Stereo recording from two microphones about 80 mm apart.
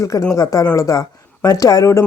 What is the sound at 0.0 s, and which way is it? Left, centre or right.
Speech, left.